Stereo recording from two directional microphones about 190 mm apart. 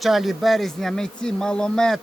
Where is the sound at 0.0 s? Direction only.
Centre (ahead or behind).